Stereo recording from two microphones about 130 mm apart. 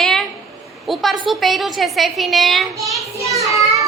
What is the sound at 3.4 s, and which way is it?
Child singing, 25° right (ahead or behind).